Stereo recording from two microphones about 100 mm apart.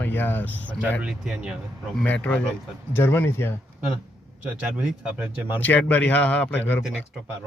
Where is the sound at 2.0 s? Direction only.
15° left (ahead or behind).